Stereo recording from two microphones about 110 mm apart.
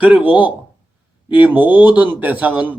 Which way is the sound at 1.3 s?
15° right (ahead or behind).